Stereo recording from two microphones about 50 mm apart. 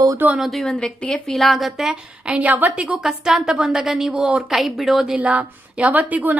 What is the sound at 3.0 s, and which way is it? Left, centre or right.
A woman's voice, centre.